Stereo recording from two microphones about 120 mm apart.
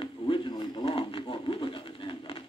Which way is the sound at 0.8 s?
45° left (ahead or behind).